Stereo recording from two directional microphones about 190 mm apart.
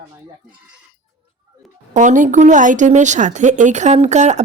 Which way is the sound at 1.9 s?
40° right (ahead or behind).